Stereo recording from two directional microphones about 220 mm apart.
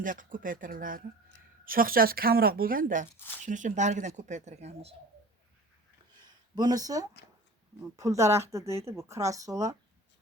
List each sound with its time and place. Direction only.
0.0 s speech: 35° right (ahead or behind)
6.2 s a sound: 20° right (ahead or behind)
7.9 s speech: 15° right (ahead or behind)